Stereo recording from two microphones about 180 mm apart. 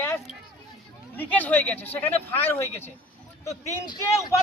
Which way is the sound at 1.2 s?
10° left (ahead or behind).